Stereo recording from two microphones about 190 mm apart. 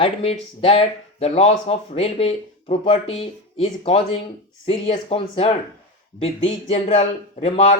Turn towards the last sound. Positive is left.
turn(degrees=30)  # may be behind; listen again after turning